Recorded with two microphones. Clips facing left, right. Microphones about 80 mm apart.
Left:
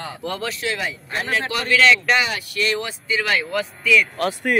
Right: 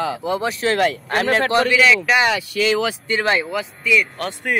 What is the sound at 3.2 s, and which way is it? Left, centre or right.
Speech, right.